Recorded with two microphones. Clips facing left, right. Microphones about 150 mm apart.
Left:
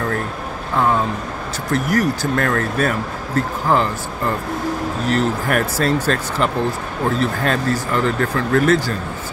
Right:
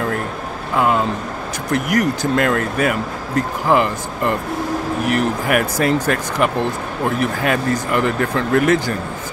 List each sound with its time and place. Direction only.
1.7 s speech: 20° right (ahead or behind)
5.0 s speech: 15° right (ahead or behind)